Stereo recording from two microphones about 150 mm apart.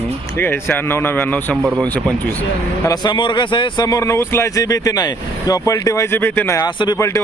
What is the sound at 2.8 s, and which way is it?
A man's voice, 30° left (ahead or behind).